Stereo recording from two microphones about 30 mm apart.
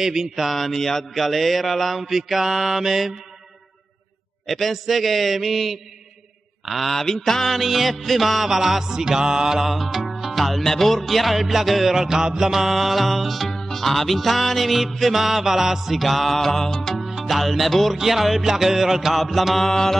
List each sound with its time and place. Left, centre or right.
0.0 s music: centre
0.5 s music: centre
4.5 s music: centre
6.9 s mantra: centre
7.5 s music: centre; by 9.6 s right
9.6 s music: centre
15.1 s music: centre
17.0 s music: centre
17.9 s music: centre
19.6 s mantra: centre